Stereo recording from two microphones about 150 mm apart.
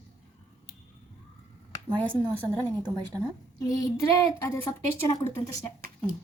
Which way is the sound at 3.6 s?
25° left (ahead or behind).